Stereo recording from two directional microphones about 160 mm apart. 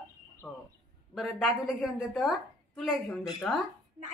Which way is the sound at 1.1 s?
Centre (ahead or behind).